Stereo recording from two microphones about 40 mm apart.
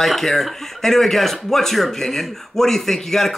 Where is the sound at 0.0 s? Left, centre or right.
Centre.